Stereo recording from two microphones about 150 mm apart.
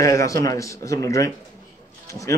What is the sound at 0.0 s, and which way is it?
Speech, 20° left (ahead or behind).